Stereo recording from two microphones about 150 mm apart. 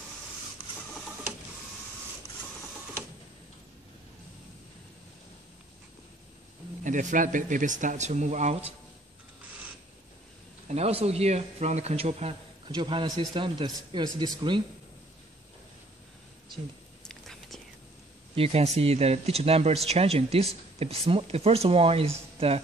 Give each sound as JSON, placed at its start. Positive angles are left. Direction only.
{"t": 6.8, "sound": "speech", "side_deg": -55}
{"t": 10.7, "sound": "speech", "side_deg": -45}
{"t": 12.7, "sound": "speech", "side_deg": -30}
{"t": 17.1, "sound": "whispering", "side_deg": 0}
{"t": 18.3, "sound": "speech", "side_deg": -40}